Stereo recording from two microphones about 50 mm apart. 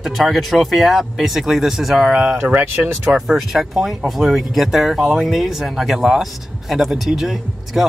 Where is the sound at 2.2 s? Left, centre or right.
Right.